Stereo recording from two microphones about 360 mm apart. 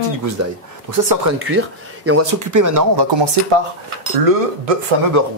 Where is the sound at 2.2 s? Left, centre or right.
Right.